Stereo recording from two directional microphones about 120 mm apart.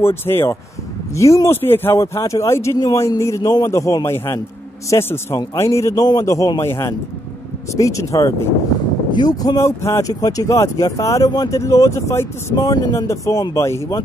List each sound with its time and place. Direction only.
0.0 s speech: 20° left (ahead or behind)